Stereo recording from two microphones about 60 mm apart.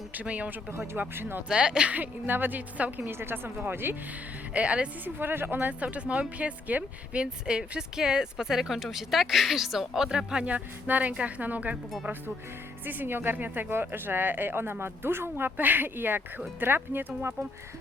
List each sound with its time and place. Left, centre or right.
0.1 s a woman's voice: right
0.7 s speech: right
1.5 s speech: centre
2.0 s a woman's voice: right
3.1 s speech: right
4.5 s a woman's voice: centre
5.0 s a woman's voice: right
12.8 s speech: right